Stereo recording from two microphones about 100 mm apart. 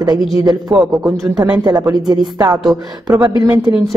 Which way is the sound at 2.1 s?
45° right (ahead or behind).